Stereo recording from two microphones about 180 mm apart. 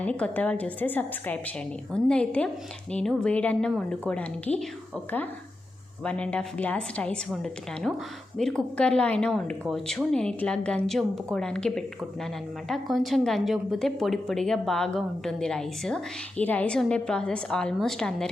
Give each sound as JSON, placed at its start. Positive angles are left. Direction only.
{"t": 0.0, "sound": "a woman's voice", "side_deg": 5}
{"t": 6.0, "sound": "speech", "side_deg": 5}